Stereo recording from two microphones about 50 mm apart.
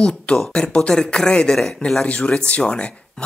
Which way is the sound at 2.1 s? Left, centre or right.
Left.